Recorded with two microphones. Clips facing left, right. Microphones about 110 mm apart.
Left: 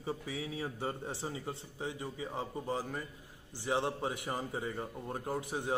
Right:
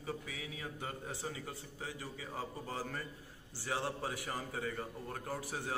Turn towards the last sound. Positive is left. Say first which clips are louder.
# left 5 dB
turn(degrees=20)  # may be behind; listen again after turning